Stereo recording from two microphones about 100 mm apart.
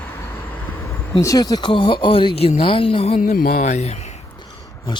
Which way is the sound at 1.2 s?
35° left (ahead or behind).